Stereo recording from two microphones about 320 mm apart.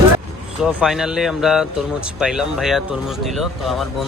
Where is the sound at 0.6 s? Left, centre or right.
Centre.